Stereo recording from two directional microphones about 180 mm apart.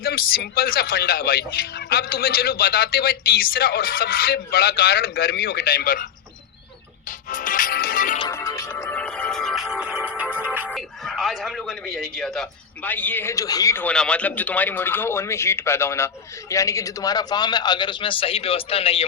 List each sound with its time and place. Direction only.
0.0 s speech: 55° left (ahead or behind)
7.3 s music: 45° left (ahead or behind)
8.3 s music: 15° left (ahead or behind); by 10.7 s 10° right (ahead or behind)
10.7 s a sound: centre (ahead or behind)
12.1 s a man's voice: centre (ahead or behind); by 19.0 s 30° left (ahead or behind)